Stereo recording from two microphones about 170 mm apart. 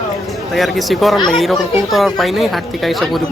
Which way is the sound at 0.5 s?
Centre (ahead or behind).